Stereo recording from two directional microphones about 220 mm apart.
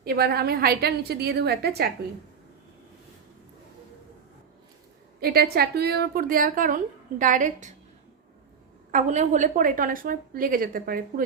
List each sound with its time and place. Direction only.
0.0 s a woman's voice: 45° right (ahead or behind)
5.2 s a woman's voice: 45° right (ahead or behind)
8.9 s a woman's voice: 35° right (ahead or behind)